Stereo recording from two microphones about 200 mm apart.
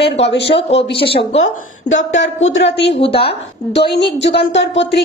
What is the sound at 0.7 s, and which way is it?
Speech, 60° left (ahead or behind).